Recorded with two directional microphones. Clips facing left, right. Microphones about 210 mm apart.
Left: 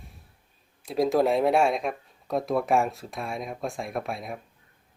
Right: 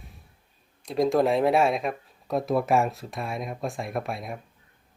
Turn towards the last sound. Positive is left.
turn(degrees=0)  # may be behind; listen again after turning